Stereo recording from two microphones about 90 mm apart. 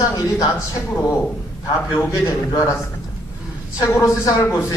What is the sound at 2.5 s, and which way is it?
Speech, 35° left (ahead or behind).